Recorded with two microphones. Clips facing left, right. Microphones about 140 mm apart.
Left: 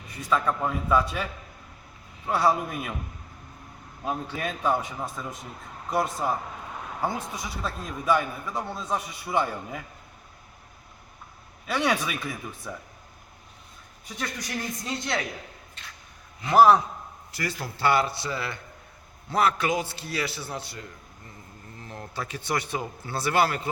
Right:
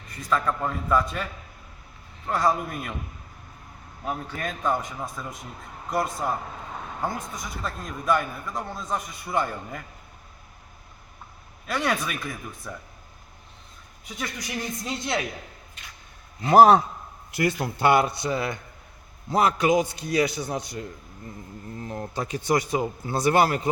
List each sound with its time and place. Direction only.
0.3 s a man's voice: 5° left (ahead or behind)
4.0 s a man's voice: 15° left (ahead or behind)
11.6 s a man's voice: centre (ahead or behind)
14.3 s a man's voice: 15° right (ahead or behind)
16.4 s a man's voice: 35° right (ahead or behind)
17.3 s a man's voice: 20° right (ahead or behind)
21.9 s a man's voice: 20° right (ahead or behind)
23.2 s speech: 45° right (ahead or behind)